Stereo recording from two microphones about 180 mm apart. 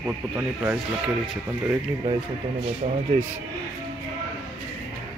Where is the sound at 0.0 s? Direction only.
10° right (ahead or behind).